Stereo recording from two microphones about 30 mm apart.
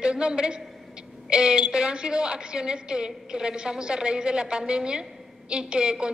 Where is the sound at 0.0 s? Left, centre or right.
Right.